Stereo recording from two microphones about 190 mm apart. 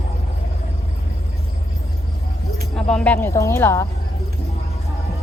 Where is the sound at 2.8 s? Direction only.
5° left (ahead or behind).